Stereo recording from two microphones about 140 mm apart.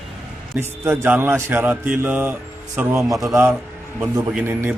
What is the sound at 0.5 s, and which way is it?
A man's voice, 10° right (ahead or behind).